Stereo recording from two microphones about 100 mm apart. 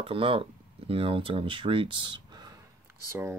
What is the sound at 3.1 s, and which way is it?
Speech, 25° right (ahead or behind).